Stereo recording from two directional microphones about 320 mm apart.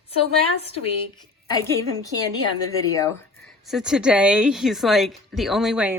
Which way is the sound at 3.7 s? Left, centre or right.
Centre.